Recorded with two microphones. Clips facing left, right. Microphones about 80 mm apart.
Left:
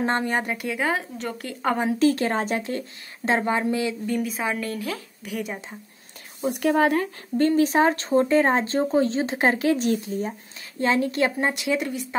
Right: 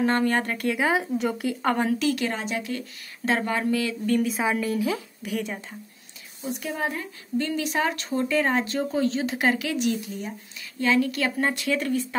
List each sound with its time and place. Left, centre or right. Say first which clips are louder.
0.0 s a woman's voice: right 1 dB; left
0.7 s a woman's voice: right 3 dB; centre
2.0 s speech: left 5 dB; left
3.3 s a woman's voice: left 2 dB; left
4.1 s a woman's voice: right 2 dB; centre
5.2 s a woman's voice: right 1 dB; centre
6.4 s speech: left 9 dB; left
7.3 s a woman's voice: left 7 dB; left; by 12.2 s centre